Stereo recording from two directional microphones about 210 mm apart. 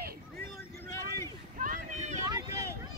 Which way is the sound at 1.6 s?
35° right (ahead or behind).